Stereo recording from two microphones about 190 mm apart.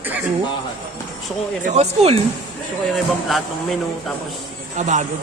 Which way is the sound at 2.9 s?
Centre (ahead or behind).